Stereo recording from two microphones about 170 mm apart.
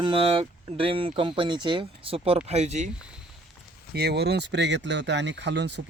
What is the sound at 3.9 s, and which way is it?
Speech, 70° right (ahead or behind).